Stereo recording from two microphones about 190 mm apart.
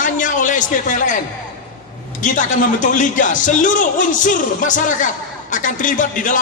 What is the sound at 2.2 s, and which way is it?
Speech, 40° left (ahead or behind).